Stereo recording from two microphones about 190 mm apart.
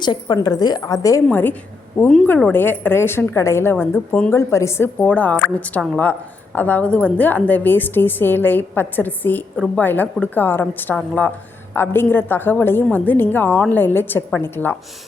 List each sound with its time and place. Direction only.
0.0 s a woman's voice: 25° left (ahead or behind)